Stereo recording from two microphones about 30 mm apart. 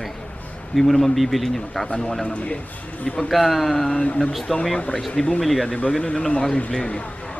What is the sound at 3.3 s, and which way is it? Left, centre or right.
A man's voice, centre.